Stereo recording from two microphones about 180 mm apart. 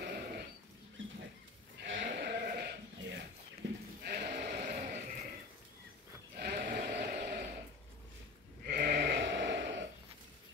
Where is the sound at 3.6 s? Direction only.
85° right.